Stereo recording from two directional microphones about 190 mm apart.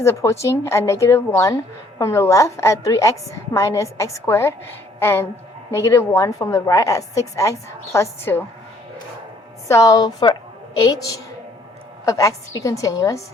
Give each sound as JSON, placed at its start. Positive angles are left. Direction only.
{"t": 0.0, "sound": "a woman's voice", "side_deg": 15}
{"t": 9.6, "sound": "a woman's voice", "side_deg": 15}